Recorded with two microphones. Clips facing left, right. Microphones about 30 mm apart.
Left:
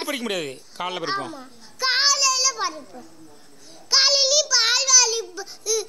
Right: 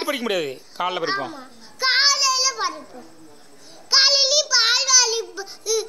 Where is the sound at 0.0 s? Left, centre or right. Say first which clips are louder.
Right 3 dB; centre.